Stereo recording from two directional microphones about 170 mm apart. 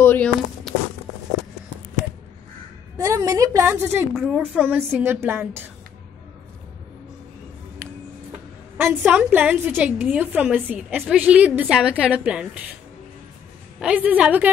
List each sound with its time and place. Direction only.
0.0 s a sound: 10° left (ahead or behind)
0.7 s a sound: centre (ahead or behind)
3.0 s a woman's voice: 20° right (ahead or behind)
4.1 s speech: centre (ahead or behind)
4.4 s a woman's voice: 10° right (ahead or behind)
8.7 s a woman's voice: 10° right (ahead or behind)
13.7 s a woman's voice: 10° right (ahead or behind)